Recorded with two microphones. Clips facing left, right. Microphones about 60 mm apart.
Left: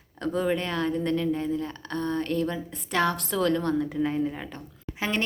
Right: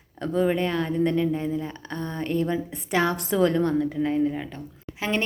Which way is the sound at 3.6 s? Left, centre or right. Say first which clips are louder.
Right 2 dB; centre.